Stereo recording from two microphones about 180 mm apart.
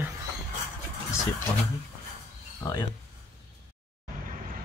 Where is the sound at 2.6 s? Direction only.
20° left (ahead or behind).